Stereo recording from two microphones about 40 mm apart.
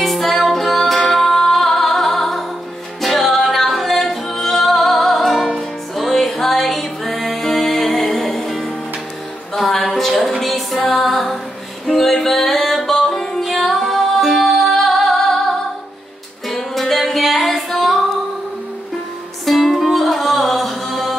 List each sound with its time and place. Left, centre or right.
0.0 s music: centre
9.7 s a sound: centre
10.4 s music: centre
16.8 s music: centre
19.4 s music: centre